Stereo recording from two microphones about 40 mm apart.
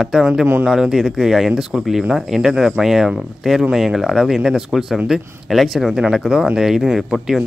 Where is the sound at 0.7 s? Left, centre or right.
Centre.